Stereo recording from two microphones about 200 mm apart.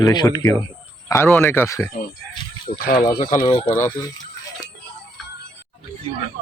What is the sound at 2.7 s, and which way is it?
Speech, 45° left (ahead or behind).